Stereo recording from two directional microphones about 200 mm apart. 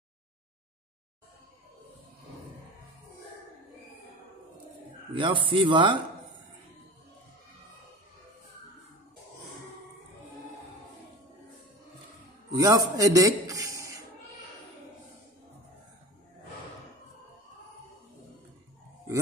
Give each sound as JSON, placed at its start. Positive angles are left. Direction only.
{"t": 5.1, "sound": "speech", "side_deg": -25}
{"t": 12.5, "sound": "a man's voice", "side_deg": -15}